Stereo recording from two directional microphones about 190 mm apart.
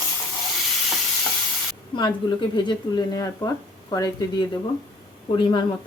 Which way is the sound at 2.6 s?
25° left (ahead or behind).